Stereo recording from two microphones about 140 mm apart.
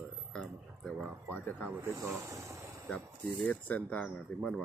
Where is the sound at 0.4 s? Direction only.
Centre (ahead or behind).